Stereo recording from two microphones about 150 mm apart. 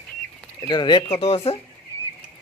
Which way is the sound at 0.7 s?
30° left (ahead or behind).